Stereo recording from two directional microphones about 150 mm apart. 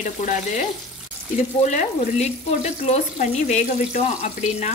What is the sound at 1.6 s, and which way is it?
Speech, 50° left (ahead or behind).